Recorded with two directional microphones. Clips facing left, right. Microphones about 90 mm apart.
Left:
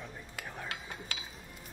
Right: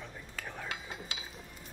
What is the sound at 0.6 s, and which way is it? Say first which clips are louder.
Cutlery: right 1 dB; 20° right (ahead or behind).